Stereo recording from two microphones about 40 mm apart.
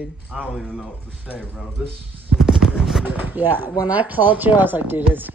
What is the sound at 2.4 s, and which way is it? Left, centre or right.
Clip-clop, centre.